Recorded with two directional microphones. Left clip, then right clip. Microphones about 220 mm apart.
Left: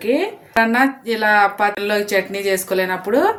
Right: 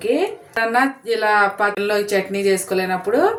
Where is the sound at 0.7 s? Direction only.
40° left (ahead or behind).